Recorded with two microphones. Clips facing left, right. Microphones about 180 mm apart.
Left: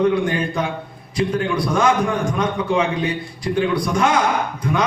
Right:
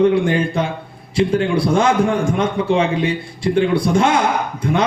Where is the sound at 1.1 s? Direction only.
30° right (ahead or behind).